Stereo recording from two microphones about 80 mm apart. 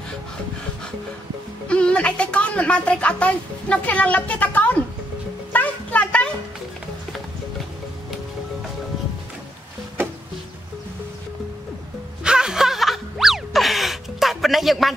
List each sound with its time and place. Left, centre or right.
1.7 s a woman's voice: centre
5.5 s a sound: centre
12.2 s music: centre